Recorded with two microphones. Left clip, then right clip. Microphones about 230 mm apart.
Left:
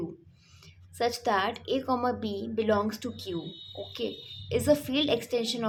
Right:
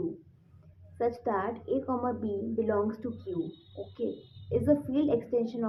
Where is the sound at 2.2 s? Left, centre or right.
Left.